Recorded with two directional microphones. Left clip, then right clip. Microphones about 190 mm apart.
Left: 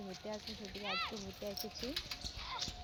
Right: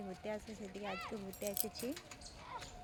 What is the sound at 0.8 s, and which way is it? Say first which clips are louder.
Speech: left 5 dB; 25° left (ahead or behind).